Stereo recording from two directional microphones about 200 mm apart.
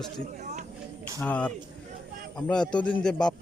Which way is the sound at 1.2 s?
5° left (ahead or behind).